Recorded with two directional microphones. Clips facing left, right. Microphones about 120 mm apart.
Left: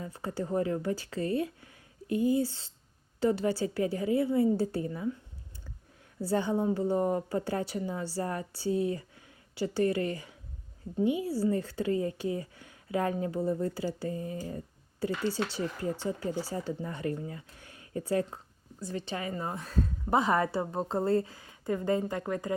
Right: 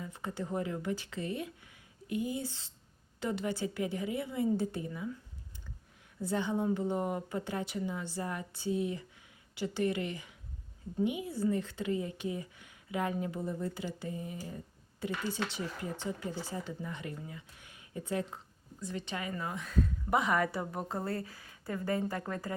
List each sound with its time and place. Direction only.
0.0 s a woman's voice: 35° left (ahead or behind)
6.2 s a woman's voice: 35° left (ahead or behind)
15.0 s a woman's voice: 30° left (ahead or behind)